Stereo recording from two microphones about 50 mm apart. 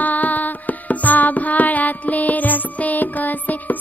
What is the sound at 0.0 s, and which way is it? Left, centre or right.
Music, left.